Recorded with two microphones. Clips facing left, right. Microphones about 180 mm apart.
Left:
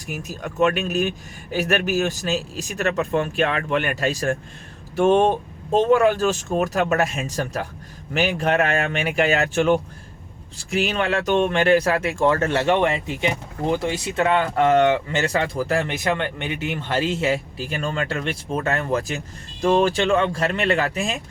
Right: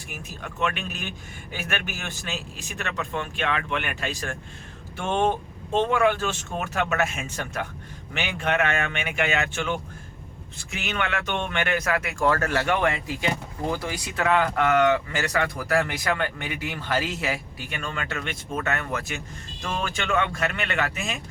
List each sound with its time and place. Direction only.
0.1 s speech: 40° left (ahead or behind)